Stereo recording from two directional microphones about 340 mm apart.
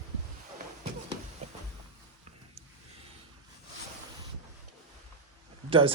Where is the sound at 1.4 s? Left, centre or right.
Centre.